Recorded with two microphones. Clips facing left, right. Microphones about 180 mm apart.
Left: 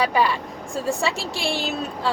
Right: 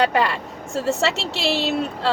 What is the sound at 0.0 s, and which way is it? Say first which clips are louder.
A woman's voice: right 1 dB; 70° right (ahead or behind).